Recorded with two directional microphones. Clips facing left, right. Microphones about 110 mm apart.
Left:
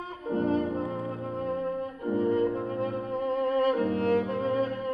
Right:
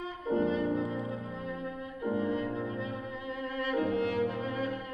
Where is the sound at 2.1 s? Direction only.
45° left (ahead or behind).